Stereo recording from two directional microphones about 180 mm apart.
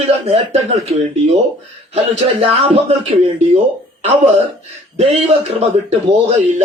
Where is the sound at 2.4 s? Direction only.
35° right (ahead or behind).